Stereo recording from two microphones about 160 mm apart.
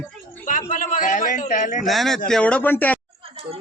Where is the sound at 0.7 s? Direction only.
55° left (ahead or behind).